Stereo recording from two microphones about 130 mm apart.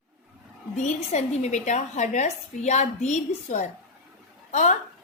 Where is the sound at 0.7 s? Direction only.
65° left (ahead or behind).